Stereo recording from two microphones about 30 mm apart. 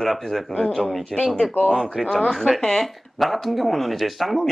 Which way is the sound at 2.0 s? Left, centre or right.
Left.